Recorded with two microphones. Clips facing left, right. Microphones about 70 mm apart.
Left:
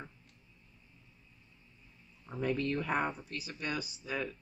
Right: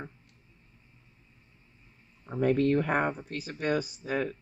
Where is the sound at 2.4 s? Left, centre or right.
Right.